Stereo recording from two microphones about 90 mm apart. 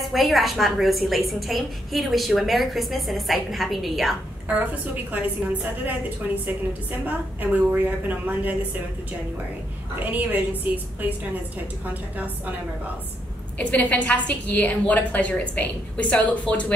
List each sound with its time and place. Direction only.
0.0 s a woman's voice: centre (ahead or behind)
5.1 s a woman's voice: 20° right (ahead or behind)
9.9 s a woman's voice: 20° right (ahead or behind)
13.6 s a woman's voice: 15° left (ahead or behind)